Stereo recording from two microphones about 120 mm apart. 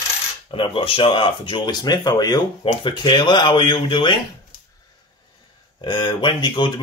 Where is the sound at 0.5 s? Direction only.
45° left (ahead or behind).